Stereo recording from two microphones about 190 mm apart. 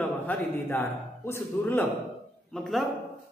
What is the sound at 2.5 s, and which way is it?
Speech, centre (ahead or behind).